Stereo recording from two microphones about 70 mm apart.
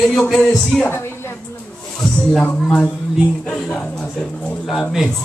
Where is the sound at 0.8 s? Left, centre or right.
Left.